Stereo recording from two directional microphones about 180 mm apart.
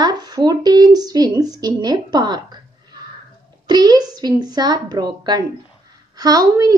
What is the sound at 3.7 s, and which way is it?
Speech, 20° right (ahead or behind).